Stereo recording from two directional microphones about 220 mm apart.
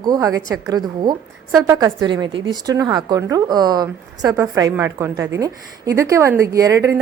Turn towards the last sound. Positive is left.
turn(degrees=-15)  # may be behind; listen again after turning